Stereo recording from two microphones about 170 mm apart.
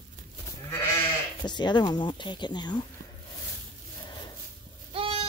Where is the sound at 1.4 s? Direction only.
25° left (ahead or behind).